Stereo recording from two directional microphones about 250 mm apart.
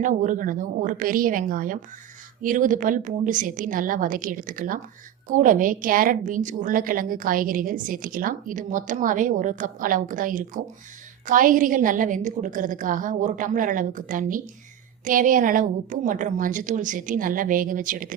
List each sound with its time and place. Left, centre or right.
0.0 s a woman's voice: right